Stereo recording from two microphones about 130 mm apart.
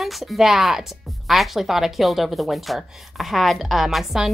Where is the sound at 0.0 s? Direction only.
Centre (ahead or behind).